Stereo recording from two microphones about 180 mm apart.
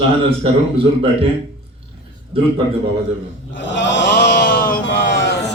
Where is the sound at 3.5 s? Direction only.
85° left; by 4.8 s 55° left (ahead or behind).